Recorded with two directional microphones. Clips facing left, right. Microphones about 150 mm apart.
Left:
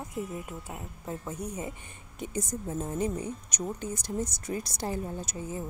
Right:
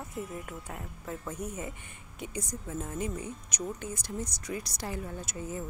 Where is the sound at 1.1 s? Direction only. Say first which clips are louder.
Left 1 dB; 30° left (ahead or behind); by 4.7 s 50° left (ahead or behind).